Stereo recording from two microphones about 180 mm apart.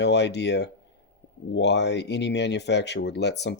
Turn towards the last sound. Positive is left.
turn(degrees=70)  # may be behind; listen again after turning